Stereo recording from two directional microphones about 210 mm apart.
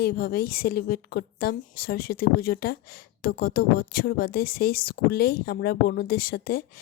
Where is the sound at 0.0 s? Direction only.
50° left (ahead or behind).